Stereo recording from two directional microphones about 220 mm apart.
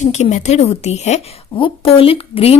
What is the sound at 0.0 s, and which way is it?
A woman's voice, 30° left (ahead or behind).